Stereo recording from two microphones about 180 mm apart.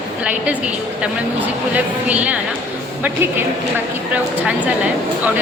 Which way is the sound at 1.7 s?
10° right (ahead or behind).